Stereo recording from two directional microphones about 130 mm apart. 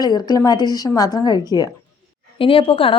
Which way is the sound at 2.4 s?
45° left (ahead or behind).